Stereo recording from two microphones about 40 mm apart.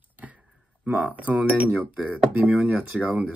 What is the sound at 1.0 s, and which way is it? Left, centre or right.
Speech, right.